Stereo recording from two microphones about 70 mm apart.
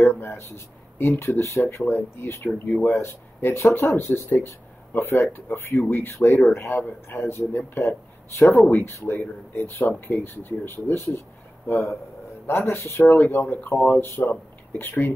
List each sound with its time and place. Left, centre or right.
0.0 s speech: left
12.4 s speech: left